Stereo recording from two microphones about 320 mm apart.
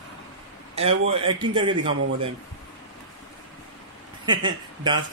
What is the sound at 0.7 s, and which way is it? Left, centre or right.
A man's voice, centre.